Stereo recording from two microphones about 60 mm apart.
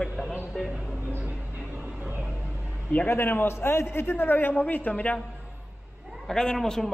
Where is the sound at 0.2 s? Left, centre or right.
Right.